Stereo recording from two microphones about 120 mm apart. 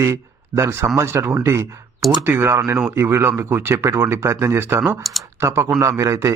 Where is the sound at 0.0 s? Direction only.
20° right (ahead or behind).